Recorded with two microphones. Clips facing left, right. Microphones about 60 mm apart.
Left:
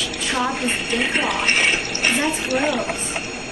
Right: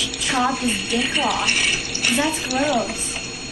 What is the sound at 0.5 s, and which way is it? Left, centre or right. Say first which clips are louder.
Speech: even; left.